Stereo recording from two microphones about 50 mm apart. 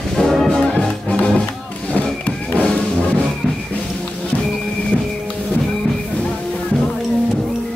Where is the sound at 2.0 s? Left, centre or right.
Left.